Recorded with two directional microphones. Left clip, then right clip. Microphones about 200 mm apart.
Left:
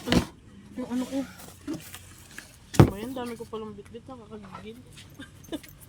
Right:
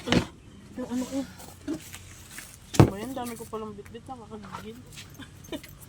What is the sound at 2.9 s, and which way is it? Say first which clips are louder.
Speech: even; centre (ahead or behind).